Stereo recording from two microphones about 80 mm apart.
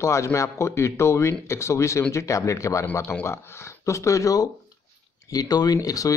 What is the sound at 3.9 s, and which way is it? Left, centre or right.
Speech, left.